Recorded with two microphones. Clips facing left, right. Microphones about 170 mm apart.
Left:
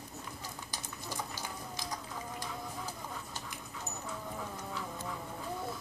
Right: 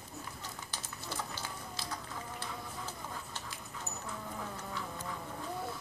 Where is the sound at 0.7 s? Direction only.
15° left (ahead or behind).